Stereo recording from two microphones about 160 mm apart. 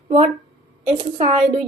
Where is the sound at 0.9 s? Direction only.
40° right (ahead or behind).